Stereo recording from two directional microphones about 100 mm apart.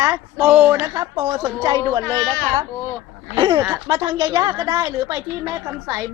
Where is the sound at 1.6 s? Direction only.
45° right (ahead or behind).